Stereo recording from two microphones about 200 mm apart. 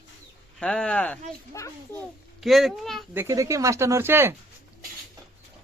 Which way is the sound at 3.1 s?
15° right (ahead or behind).